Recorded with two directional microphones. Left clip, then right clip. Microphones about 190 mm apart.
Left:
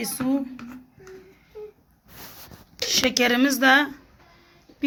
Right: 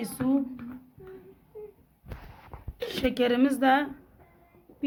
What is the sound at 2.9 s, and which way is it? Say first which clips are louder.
A woman's voice: left 6 dB; 20° left (ahead or behind).